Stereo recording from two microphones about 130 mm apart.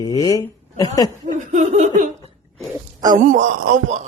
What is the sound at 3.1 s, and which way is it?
Speech, 75° right (ahead or behind).